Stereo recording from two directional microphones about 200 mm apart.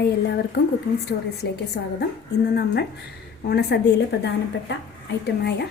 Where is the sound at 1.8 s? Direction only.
55° left (ahead or behind).